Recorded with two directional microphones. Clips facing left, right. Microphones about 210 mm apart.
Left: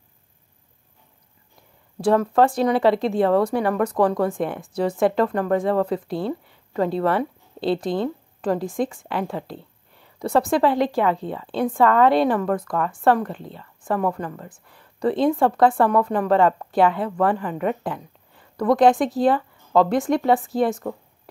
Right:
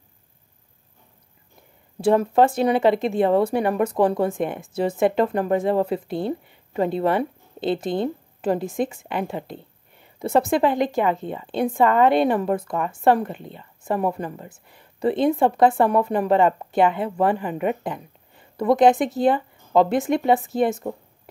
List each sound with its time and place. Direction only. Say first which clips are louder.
2.3 s a woman's voice: even; 20° right (ahead or behind)
14.5 s a woman's voice: even; 25° right (ahead or behind)
17.4 s a woman's voice: even; 10° right (ahead or behind)